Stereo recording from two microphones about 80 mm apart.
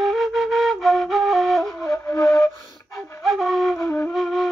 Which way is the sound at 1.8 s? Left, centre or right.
Left.